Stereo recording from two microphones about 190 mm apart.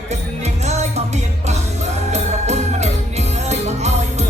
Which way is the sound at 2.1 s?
35° right (ahead or behind).